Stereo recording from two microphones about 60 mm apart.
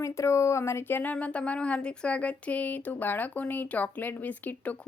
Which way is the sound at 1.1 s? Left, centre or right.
Left.